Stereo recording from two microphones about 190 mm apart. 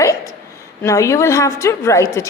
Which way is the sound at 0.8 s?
15° left (ahead or behind).